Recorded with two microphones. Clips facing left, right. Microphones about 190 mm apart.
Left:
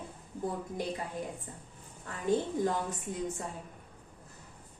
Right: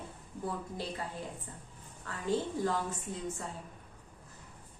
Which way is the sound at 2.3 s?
15° left (ahead or behind).